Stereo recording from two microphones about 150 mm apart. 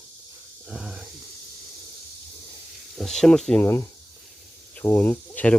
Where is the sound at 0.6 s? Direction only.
5° right (ahead or behind).